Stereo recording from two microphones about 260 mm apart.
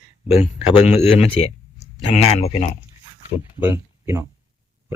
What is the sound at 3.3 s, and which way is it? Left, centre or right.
Speech, centre.